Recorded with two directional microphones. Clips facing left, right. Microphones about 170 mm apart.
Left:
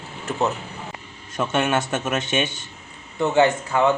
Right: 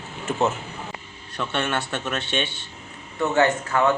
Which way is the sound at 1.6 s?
15° left (ahead or behind).